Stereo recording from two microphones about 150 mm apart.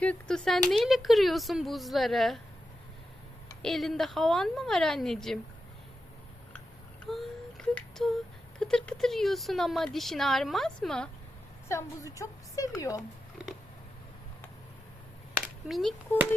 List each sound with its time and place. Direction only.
0.0 s speech: 5° left (ahead or behind)
3.6 s speech: centre (ahead or behind)
7.1 s a sound: centre (ahead or behind)
8.5 s speech: 5° left (ahead or behind)
11.7 s a woman's voice: 20° left (ahead or behind)
15.4 s a sound: centre (ahead or behind)